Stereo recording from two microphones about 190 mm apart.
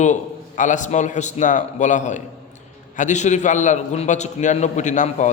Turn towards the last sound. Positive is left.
turn(degrees=40)  # may be behind; listen again after turning